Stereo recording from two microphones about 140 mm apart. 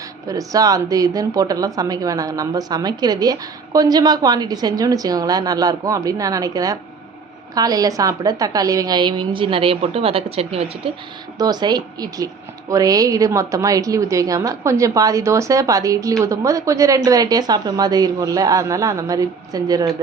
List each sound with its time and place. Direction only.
0.3 s a woman's voice: 25° right (ahead or behind); by 10.7 s 45° right (ahead or behind)
11.3 s speech: 30° right (ahead or behind)